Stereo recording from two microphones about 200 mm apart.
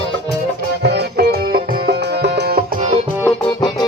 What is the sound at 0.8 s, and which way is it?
Music, 55° right (ahead or behind).